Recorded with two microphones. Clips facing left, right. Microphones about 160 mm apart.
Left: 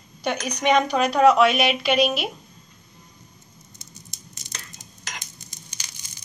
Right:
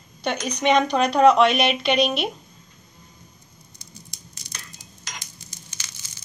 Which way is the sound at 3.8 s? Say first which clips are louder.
Right 2 dB; 20° left (ahead or behind).